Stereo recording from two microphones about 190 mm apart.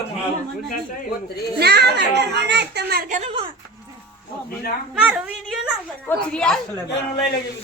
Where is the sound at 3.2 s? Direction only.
30° right (ahead or behind).